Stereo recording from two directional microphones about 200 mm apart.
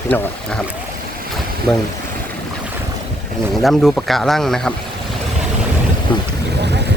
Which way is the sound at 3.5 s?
Centre (ahead or behind).